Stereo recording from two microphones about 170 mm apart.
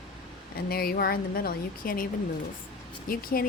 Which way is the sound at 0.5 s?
60° left (ahead or behind).